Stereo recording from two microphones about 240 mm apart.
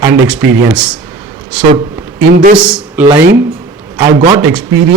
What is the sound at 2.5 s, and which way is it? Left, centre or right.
Speech, centre.